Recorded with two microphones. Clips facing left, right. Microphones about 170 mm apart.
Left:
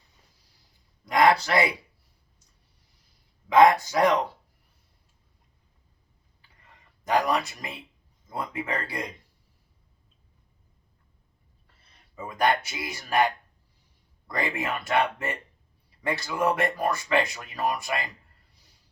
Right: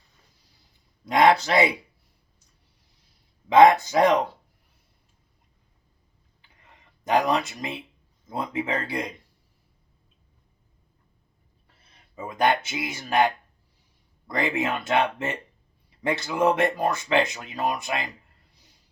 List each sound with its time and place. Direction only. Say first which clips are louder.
1.0 s speech: right 2 dB; 25° right (ahead or behind)
3.5 s speech: right 3 dB; 25° right (ahead or behind)
6.4 s a sound: right 2 dB; 20° right (ahead or behind)
8.3 s speech: right 3 dB; 20° right (ahead or behind)
12.1 s speech: right 2 dB; 20° right (ahead or behind)